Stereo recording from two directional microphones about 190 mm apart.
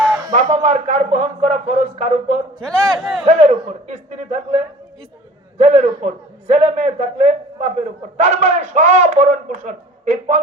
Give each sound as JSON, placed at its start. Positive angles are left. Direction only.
{"t": 0.3, "sound": "a man's voice", "side_deg": -40}
{"t": 2.6, "sound": "a man's voice", "side_deg": 0}
{"t": 3.2, "sound": "a man's voice", "side_deg": -35}